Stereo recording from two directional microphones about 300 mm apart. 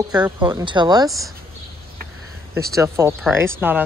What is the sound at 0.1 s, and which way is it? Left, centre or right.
Speech, centre.